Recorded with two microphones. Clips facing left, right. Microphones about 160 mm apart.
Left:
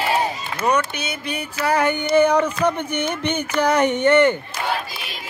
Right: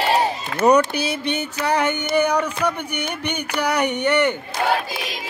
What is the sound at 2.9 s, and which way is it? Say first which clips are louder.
Speech: left 4 dB; 15° right (ahead or behind).